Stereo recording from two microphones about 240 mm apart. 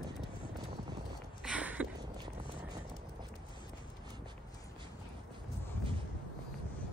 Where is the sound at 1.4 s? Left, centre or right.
Centre.